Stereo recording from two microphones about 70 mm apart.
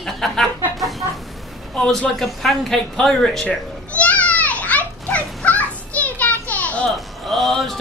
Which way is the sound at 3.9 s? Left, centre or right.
Centre.